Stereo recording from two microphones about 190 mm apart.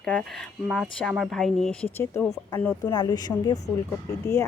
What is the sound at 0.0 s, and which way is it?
Speech, centre (ahead or behind).